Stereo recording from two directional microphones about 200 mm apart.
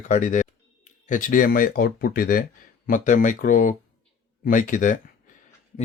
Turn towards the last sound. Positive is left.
turn(degrees=40)  # may be behind; listen again after turning